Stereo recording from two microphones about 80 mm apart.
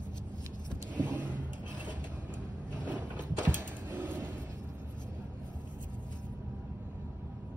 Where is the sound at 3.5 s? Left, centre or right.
Right.